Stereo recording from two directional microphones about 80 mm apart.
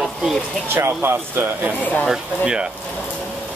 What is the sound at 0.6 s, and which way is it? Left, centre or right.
Speech, right.